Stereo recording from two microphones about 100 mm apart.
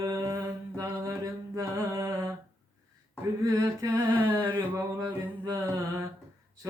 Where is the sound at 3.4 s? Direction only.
30° right (ahead or behind).